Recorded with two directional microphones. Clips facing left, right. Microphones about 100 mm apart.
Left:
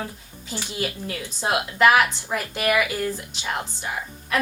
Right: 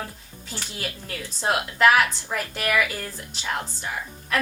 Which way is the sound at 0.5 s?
15° left (ahead or behind).